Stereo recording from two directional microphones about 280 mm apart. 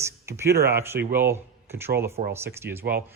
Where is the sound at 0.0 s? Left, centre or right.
Centre.